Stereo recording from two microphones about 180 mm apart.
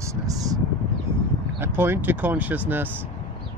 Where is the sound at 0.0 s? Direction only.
20° right (ahead or behind).